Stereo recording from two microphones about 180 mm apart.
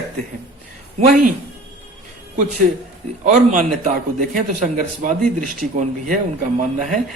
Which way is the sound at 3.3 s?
45° right (ahead or behind).